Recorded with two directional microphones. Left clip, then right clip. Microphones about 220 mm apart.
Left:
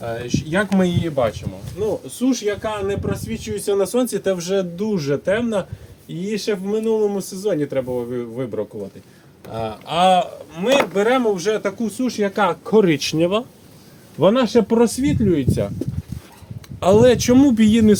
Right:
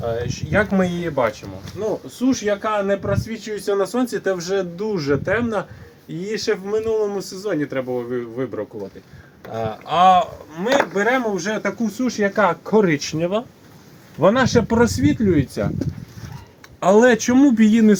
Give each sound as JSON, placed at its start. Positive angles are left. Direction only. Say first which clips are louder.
{"t": 0.0, "sound": "speech", "louder": "right 1 dB", "side_deg": 15}
{"t": 9.5, "sound": "speech", "louder": "right 2 dB", "side_deg": 25}
{"t": 14.2, "sound": "speech", "louder": "even", "side_deg": 40}
{"t": 14.5, "sound": "speech", "louder": "left 1 dB", "side_deg": 25}
{"t": 16.8, "sound": "speech", "louder": "left 1 dB", "side_deg": 35}